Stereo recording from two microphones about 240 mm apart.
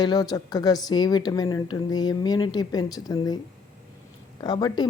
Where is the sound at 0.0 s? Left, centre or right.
Centre.